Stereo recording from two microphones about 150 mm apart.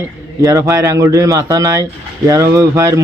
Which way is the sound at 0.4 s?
20° right (ahead or behind).